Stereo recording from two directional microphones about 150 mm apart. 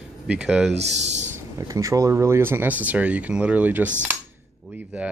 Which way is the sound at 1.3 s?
20° right (ahead or behind).